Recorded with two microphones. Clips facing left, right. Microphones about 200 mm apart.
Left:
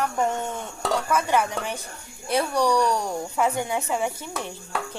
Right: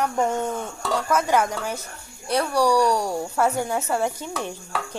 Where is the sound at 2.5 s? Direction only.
10° right (ahead or behind).